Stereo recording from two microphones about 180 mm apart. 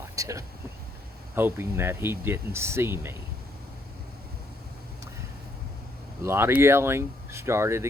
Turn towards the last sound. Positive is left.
turn(degrees=-15)  # may be behind; listen again after turning